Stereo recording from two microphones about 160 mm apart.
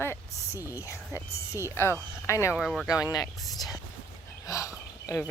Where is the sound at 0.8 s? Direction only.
15° left (ahead or behind).